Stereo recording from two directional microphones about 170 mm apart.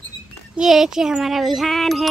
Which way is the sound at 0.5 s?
Centre (ahead or behind).